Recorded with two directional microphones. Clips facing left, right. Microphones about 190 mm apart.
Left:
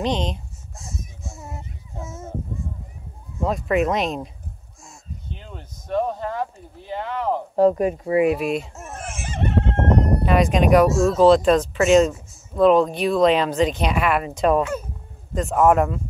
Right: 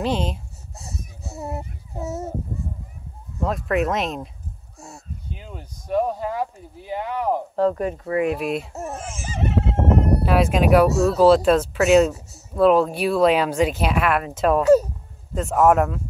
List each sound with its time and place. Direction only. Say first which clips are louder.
0.0 s speech: even; 5° right (ahead or behind)
1.6 s a sound: right 5 dB; 40° right (ahead or behind)
3.4 s speech: left 2 dB; centre (ahead or behind)
5.3 s speech: right 1 dB; 5° right (ahead or behind)
7.5 s speech: left 7 dB; 10° left (ahead or behind)
14.6 s speech: right 10 dB; 40° right (ahead or behind)
15.3 s speech: even; 5° right (ahead or behind)